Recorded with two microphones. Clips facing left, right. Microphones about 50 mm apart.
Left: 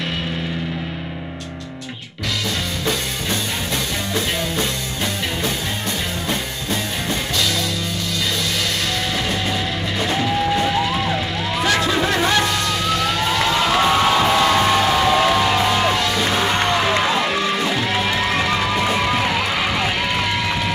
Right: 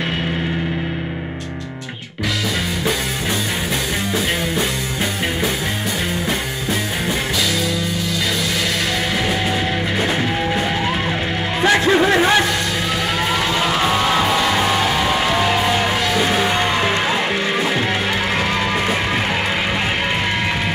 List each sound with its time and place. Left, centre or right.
2.8 s music: centre
6.2 s music: centre
9.3 s music: centre
11.6 s music: right
12.9 s vehicle: centre
13.7 s music: centre
17.3 s music: right